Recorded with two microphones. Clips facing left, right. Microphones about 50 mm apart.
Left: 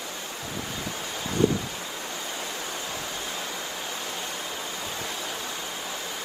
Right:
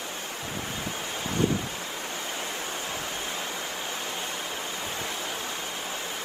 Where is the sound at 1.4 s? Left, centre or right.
Right.